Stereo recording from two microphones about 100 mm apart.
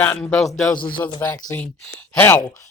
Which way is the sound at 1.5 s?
15° left (ahead or behind).